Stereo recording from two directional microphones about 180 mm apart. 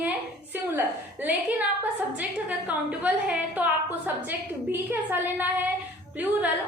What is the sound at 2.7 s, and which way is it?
A woman's voice, 10° right (ahead or behind).